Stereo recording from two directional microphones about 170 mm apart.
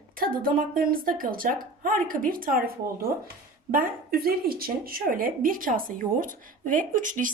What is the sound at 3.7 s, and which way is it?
Speech, 60° right (ahead or behind).